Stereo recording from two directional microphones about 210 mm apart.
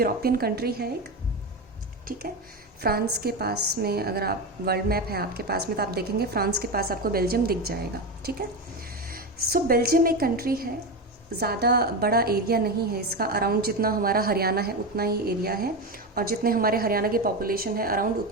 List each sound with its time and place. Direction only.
0.0 s a woman's voice: 45° right (ahead or behind)
2.8 s a woman's voice: 45° right (ahead or behind)